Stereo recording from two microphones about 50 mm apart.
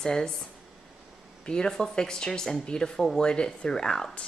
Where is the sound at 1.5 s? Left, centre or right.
Centre.